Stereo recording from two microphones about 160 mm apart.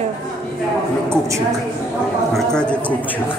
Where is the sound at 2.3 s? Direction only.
5° left (ahead or behind).